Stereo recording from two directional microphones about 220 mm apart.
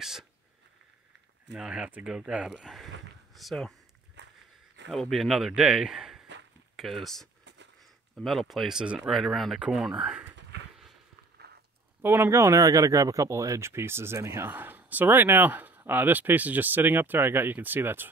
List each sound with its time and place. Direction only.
0.0 s speech: centre (ahead or behind)
1.5 s speech: 5° right (ahead or behind)
4.2 s walk: 50° right (ahead or behind)
4.8 s speech: centre (ahead or behind)
12.0 s speech: 10° right (ahead or behind)